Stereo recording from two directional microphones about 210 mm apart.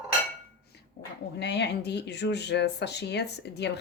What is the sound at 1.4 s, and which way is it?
Speech, 55° left (ahead or behind).